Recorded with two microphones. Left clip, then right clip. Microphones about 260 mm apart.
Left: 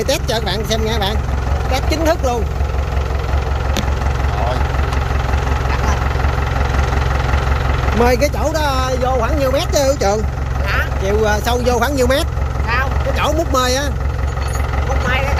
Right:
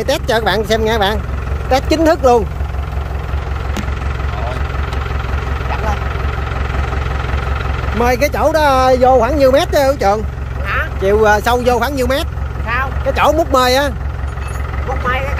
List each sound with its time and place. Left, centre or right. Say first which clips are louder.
0.0 s speech: right 4 dB; centre
8.0 s speech: right 2 dB; centre